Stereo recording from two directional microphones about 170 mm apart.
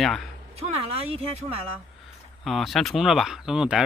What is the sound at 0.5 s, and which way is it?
Speech, 35° right (ahead or behind).